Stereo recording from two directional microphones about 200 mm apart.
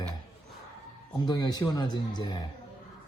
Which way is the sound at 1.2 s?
20° left (ahead or behind).